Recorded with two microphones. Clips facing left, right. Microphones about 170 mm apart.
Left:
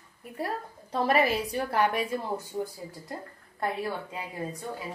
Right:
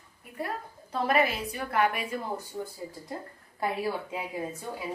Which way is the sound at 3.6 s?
5° right (ahead or behind).